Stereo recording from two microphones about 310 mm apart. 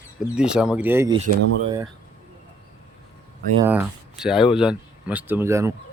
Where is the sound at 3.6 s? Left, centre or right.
Centre.